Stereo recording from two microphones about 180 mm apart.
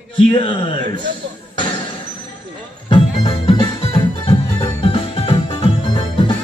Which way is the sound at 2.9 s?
30° left (ahead or behind).